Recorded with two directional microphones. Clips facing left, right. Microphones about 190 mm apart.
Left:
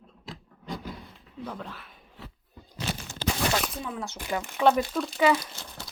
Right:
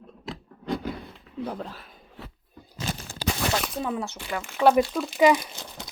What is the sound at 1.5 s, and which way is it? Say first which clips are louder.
Speech: right 2 dB; 35° right (ahead or behind).